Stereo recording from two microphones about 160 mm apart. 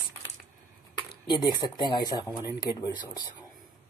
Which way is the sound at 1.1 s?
25° left (ahead or behind).